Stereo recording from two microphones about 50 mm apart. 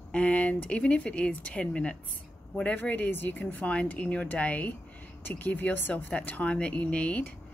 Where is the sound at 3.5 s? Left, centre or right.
Left.